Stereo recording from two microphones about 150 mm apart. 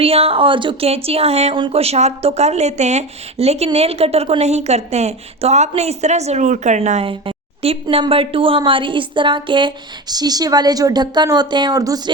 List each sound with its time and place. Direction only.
0.0 s a woman's voice: 40° right (ahead or behind)
7.1 s a woman's voice: 40° right (ahead or behind)